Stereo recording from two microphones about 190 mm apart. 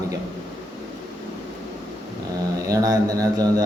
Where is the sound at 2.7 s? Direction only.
20° right (ahead or behind).